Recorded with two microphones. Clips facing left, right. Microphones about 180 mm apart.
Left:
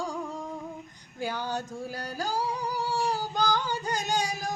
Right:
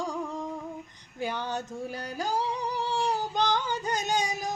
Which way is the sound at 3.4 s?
20° right (ahead or behind).